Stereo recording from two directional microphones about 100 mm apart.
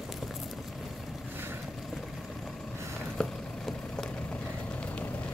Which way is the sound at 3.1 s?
5° left (ahead or behind).